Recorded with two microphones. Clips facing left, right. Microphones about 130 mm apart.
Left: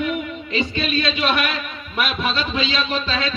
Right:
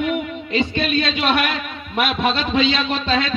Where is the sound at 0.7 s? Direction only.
55° right (ahead or behind).